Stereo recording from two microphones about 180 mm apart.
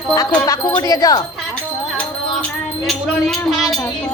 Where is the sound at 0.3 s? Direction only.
10° left (ahead or behind).